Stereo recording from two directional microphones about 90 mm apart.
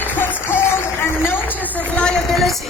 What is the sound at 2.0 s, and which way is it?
Speech, centre (ahead or behind).